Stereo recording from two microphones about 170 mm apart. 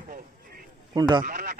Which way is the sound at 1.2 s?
55° right (ahead or behind).